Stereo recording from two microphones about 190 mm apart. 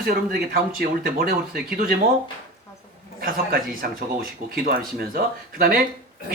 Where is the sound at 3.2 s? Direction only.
50° right (ahead or behind).